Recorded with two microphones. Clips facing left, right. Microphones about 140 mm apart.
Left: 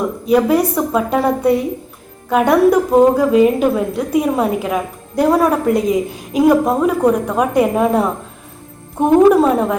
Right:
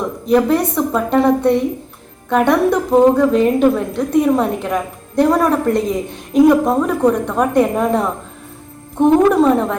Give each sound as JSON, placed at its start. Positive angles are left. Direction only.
{"t": 0.3, "sound": "a woman's voice", "side_deg": 5}